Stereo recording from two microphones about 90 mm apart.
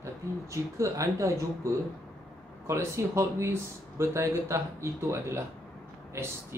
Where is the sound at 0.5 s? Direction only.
35° right (ahead or behind).